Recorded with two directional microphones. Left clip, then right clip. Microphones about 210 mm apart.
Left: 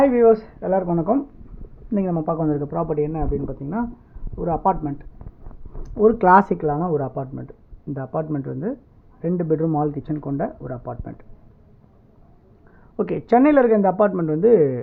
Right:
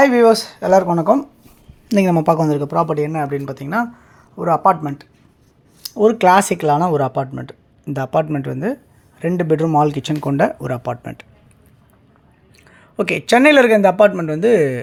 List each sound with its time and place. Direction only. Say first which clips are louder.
0.0 s speech: right 4 dB; 25° right (ahead or behind)
1.9 s a man's voice: right 9 dB; 40° right (ahead or behind)
13.0 s speech: right 4 dB; 10° right (ahead or behind)